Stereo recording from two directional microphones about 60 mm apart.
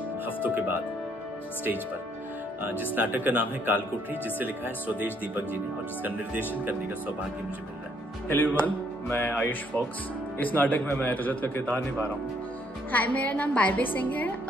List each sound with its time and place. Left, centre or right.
0.4 s speech: right
2.8 s speech: right
6.6 s speech: right
8.3 s a woman's voice: left